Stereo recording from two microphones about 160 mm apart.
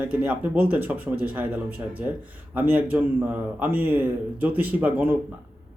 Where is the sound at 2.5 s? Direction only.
10° right (ahead or behind).